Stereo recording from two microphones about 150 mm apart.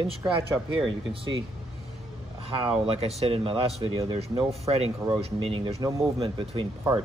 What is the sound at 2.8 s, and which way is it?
Speech, 40° right (ahead or behind).